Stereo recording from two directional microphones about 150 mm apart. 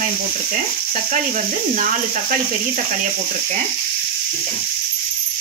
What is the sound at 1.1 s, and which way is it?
Speech, 60° right (ahead or behind).